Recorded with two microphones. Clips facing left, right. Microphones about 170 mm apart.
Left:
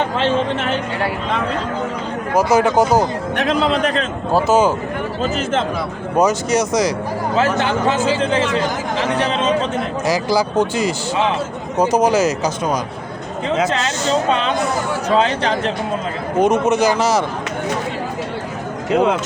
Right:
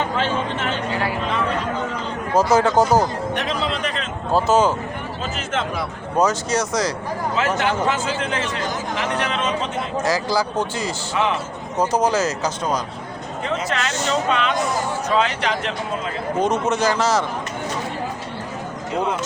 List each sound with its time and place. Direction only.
2.3 s speech: 15° left (ahead or behind)
3.3 s a man's voice: 55° left (ahead or behind)
4.3 s speech: 10° left (ahead or behind)
6.1 s speech: 15° left (ahead or behind)
7.3 s speech: 30° left (ahead or behind)
10.1 s speech: 15° left (ahead or behind)
13.7 s speech: 25° left (ahead or behind)
16.4 s speech: 15° left (ahead or behind)
18.9 s speech: 75° left (ahead or behind)